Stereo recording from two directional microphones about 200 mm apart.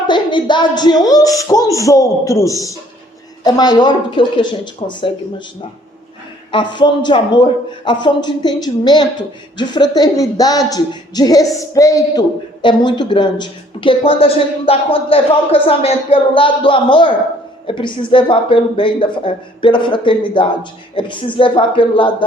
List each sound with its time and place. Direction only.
0.1 s a man's voice: 25° left (ahead or behind)
6.5 s a man's voice: 25° left (ahead or behind)